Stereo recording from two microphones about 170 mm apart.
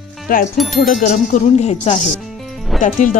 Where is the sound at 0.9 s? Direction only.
50° left (ahead or behind).